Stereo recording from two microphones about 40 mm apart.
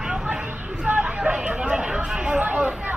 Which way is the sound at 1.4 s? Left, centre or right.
Right.